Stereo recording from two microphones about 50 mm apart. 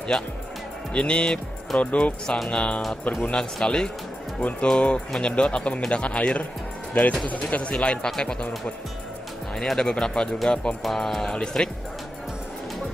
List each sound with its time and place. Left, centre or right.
0.9 s speech: left
2.3 s speech: centre
4.4 s speech: left
4.6 s speech: centre
9.6 s speech: centre
10.8 s speech: centre